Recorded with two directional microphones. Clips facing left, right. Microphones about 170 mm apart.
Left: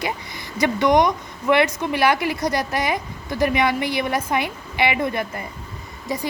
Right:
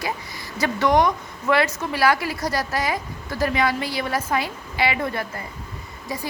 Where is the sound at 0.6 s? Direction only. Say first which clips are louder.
Left 2 dB; 15° left (ahead or behind).